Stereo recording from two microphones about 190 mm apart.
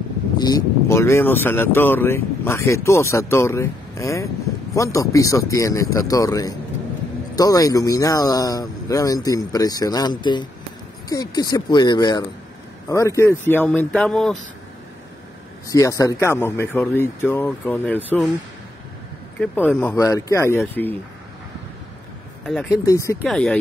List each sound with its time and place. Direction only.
0.4 s speech: 20° left (ahead or behind); by 14.3 s 5° left (ahead or behind)
15.7 s speech: 15° left (ahead or behind)
19.4 s speech: 10° left (ahead or behind)
22.4 s speech: centre (ahead or behind)
22.7 s speech: 15° left (ahead or behind)
23.2 s speech: 5° left (ahead or behind)